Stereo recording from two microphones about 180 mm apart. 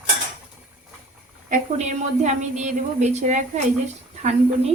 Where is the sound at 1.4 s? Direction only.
40° right (ahead or behind).